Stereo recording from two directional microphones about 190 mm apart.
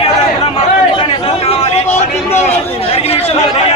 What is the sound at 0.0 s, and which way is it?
Chatter, 30° left (ahead or behind).